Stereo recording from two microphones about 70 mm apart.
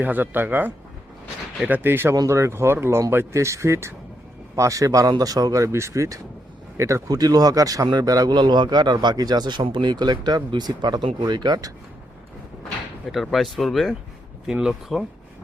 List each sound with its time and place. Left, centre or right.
0.0 s speech: right
7.1 s a man's voice: right
13.3 s speech: centre